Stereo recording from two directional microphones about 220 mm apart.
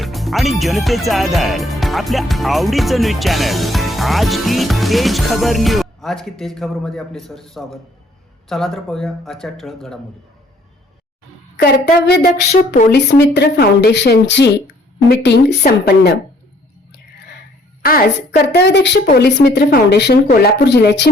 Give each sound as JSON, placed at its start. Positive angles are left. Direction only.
{"t": 0.0, "sound": "speech", "side_deg": 0}
{"t": 11.5, "sound": "speech", "side_deg": 45}
{"t": 12.5, "sound": "speech", "side_deg": 35}
{"t": 12.9, "sound": "speech", "side_deg": 50}
{"t": 17.8, "sound": "speech", "side_deg": 45}